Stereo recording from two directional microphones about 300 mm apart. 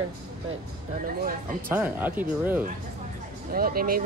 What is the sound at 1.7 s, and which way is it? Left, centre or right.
Speech, centre.